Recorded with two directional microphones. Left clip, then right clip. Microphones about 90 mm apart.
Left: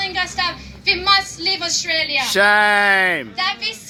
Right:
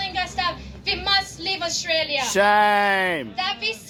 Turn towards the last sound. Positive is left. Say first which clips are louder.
# left 4 dB
turn(degrees=-50)  # may be behind; listen again after turning